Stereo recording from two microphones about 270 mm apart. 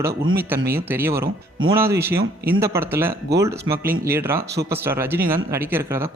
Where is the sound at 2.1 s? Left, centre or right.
Right.